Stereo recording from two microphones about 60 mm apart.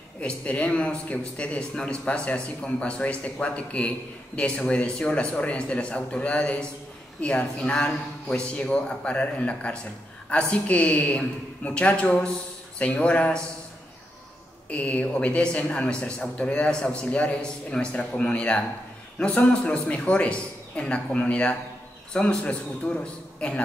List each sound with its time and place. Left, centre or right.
0.2 s a man's voice: centre
14.7 s a man's voice: left